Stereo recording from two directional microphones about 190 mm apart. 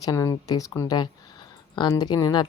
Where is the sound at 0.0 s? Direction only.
20° left (ahead or behind).